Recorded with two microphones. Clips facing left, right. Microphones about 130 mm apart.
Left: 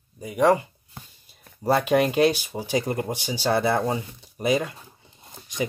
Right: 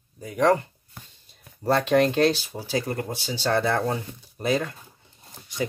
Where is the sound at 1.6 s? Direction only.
10° left (ahead or behind).